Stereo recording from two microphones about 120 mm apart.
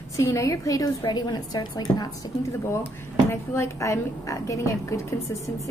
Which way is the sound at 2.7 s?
20° left (ahead or behind).